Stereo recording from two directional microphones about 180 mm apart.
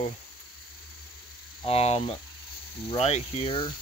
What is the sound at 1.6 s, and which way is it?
Speech, 35° left (ahead or behind).